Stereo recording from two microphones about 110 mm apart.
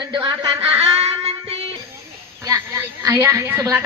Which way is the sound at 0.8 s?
65° right (ahead or behind).